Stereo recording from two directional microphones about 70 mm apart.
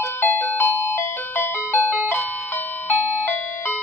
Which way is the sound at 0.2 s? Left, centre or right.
Left.